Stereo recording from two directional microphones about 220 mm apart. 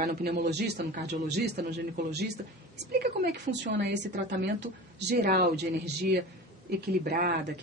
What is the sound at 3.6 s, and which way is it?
A woman's voice, 50° right (ahead or behind).